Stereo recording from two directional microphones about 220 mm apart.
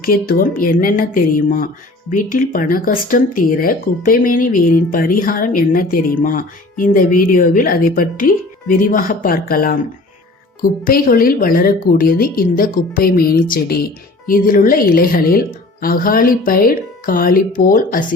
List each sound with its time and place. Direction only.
0.0 s speech: 40° left (ahead or behind)